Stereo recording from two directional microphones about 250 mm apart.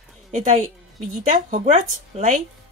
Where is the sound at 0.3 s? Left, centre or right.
Right.